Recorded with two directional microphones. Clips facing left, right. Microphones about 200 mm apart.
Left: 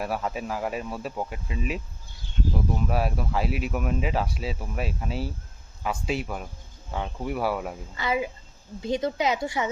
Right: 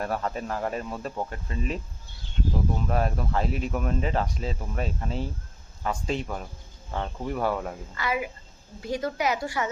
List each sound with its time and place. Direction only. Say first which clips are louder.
0.0 s speech: even; 5° left (ahead or behind)
7.9 s speech: left 2 dB; 25° left (ahead or behind)